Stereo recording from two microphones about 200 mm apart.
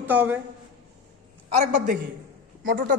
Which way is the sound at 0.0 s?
10° right (ahead or behind).